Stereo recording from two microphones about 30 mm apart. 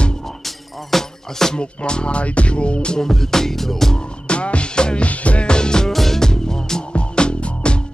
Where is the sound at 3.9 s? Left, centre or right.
Left.